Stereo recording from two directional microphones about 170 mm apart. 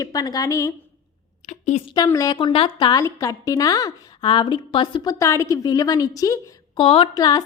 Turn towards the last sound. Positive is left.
turn(degrees=25)  # may be behind; listen again after turning